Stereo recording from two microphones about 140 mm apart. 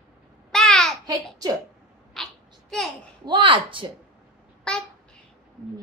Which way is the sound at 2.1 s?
Centre (ahead or behind).